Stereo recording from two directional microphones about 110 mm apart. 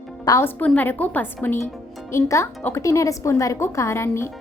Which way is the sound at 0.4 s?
15° left (ahead or behind).